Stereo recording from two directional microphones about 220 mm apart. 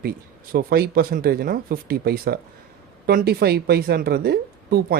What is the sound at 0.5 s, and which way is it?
Speech, 45° right (ahead or behind).